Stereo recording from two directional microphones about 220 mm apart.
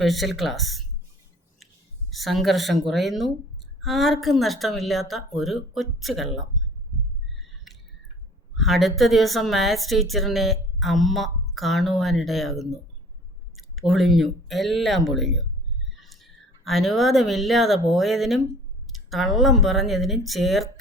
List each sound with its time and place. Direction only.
0.0 s a woman's voice: centre (ahead or behind)
2.0 s a woman's voice: centre (ahead or behind)
8.5 s a woman's voice: centre (ahead or behind)